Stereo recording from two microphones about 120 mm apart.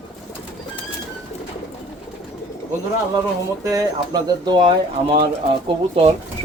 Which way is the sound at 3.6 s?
30° right (ahead or behind).